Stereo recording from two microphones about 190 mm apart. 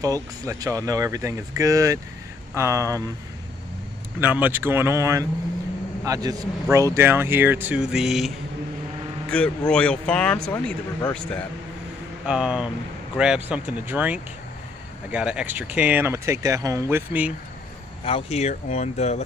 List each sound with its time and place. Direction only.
0.0 s speech: 20° right (ahead or behind)
4.2 s speech: 10° right (ahead or behind)
9.3 s speech: 5° left (ahead or behind)
12.3 s speech: 5° right (ahead or behind)
18.0 s speech: 30° left (ahead or behind)